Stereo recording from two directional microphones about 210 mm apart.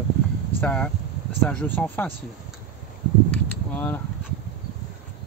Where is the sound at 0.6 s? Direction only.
5° left (ahead or behind).